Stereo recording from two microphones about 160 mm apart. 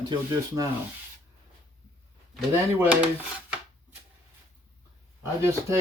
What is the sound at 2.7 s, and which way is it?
Speech, 10° right (ahead or behind).